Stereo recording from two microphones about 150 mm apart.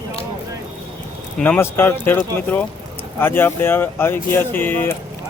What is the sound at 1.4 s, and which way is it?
Speech, 10° left (ahead or behind).